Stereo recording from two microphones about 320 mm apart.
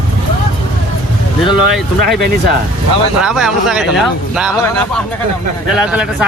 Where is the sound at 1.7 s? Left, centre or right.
Centre.